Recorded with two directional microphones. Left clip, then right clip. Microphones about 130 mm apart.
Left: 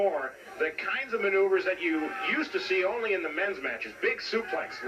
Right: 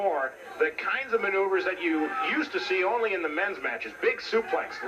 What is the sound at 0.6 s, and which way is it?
A man's voice, 20° left (ahead or behind).